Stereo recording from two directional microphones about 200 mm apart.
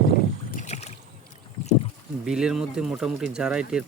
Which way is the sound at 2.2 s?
5° right (ahead or behind).